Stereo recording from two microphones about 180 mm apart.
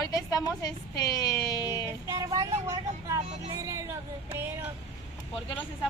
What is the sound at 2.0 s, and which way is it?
Speech, 20° right (ahead or behind).